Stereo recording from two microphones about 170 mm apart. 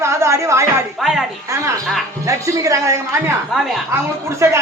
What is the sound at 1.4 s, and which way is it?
A man's voice, 15° right (ahead or behind).